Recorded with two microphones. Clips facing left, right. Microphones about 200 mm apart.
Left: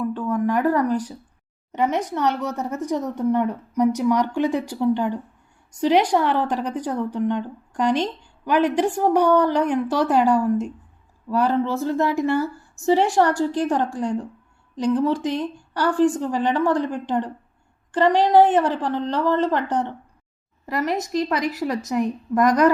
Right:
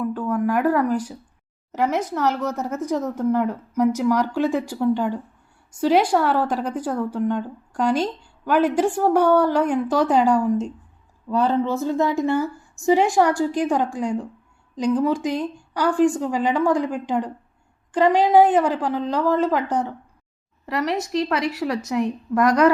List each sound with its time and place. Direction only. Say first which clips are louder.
0.2 s speech: even; 10° right (ahead or behind)
9.0 s a woman's voice: even; 15° left (ahead or behind)
9.2 s speech: right 1 dB; 10° right (ahead or behind)
9.9 s a woman's voice: right 2 dB; 5° left (ahead or behind)
10.2 s speech: even; 15° right (ahead or behind)
21.1 s a woman's voice: even; 40° left (ahead or behind)
21.8 s speech: even; centre (ahead or behind)